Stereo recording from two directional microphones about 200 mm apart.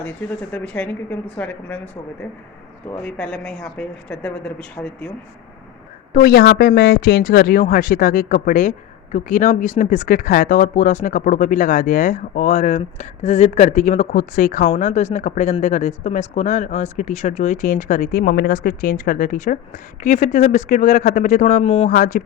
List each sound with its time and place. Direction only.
0.5 s speech: 5° left (ahead or behind)
3.0 s speech: 5° left (ahead or behind)
6.1 s speech: 50° left (ahead or behind)